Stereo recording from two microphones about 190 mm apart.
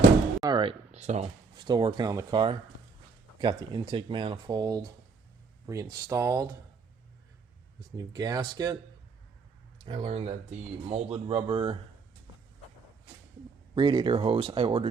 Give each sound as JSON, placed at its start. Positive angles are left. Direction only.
{"t": 0.4, "sound": "a sound", "side_deg": -25}
{"t": 0.9, "sound": "speech", "side_deg": -35}
{"t": 1.6, "sound": "speech", "side_deg": -20}
{"t": 7.9, "sound": "speech", "side_deg": -20}
{"t": 13.7, "sound": "speech", "side_deg": -25}